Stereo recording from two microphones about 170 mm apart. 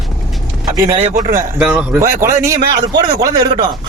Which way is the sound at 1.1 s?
60° right (ahead or behind).